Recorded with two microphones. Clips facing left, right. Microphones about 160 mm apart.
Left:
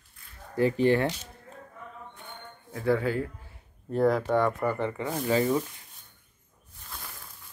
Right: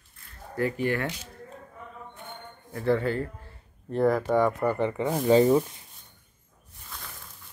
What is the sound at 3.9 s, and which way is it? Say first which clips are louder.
Speech: right 1 dB; centre (ahead or behind).